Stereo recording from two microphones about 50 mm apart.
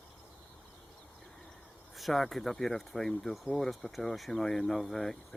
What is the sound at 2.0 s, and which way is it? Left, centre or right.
Speech, centre.